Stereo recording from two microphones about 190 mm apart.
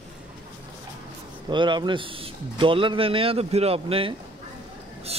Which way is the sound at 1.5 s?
25° right (ahead or behind).